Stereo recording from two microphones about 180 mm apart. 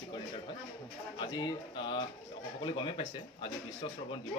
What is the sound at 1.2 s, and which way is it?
Speech, 25° left (ahead or behind).